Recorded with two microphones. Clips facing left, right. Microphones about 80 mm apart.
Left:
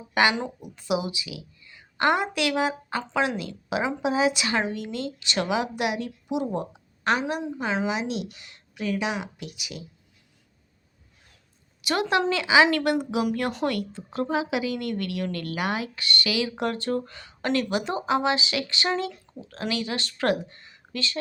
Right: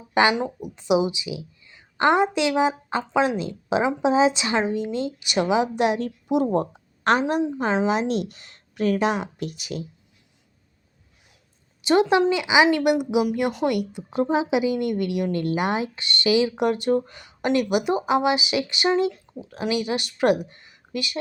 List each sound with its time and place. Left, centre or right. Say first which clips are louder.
0.1 s a woman's voice: right 3 dB; right
6.2 s a woman's voice: right 7 dB; right
11.8 s a woman's voice: right 6 dB; right
20.4 s a sound: right 4 dB; centre